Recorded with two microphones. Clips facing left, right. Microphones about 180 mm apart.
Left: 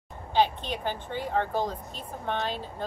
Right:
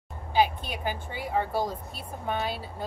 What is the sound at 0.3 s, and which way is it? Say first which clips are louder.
Speech: even; 10° right (ahead or behind).